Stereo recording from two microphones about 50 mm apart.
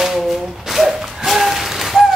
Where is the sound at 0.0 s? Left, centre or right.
Centre.